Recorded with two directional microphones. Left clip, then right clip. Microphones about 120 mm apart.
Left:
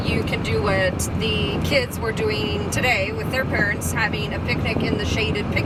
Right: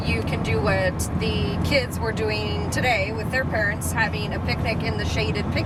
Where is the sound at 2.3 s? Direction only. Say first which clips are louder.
Left 2 dB; 5° left (ahead or behind).